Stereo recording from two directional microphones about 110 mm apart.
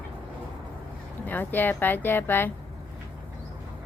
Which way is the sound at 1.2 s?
15° left (ahead or behind).